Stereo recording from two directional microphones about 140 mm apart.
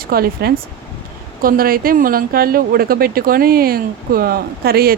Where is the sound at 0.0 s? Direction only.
90° right.